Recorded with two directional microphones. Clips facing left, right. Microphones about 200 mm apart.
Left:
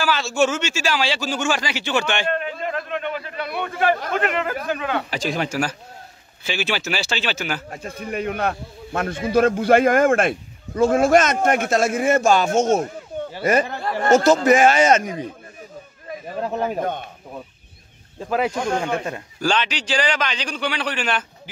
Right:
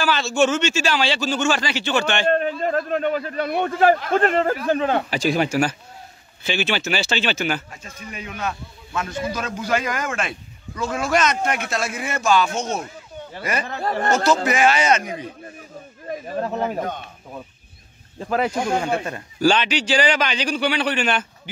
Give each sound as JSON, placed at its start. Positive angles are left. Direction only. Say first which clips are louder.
{"t": 0.0, "sound": "speech", "louder": "right 1 dB", "side_deg": 5}
{"t": 2.2, "sound": "a man's voice", "louder": "right 5 dB", "side_deg": -40}
{"t": 5.1, "sound": "a man's voice", "louder": "right 4 dB", "side_deg": -5}
{"t": 7.7, "sound": "speech", "louder": "left 9 dB", "side_deg": 55}
{"t": 18.5, "sound": "a man's voice", "louder": "right 1 dB", "side_deg": -5}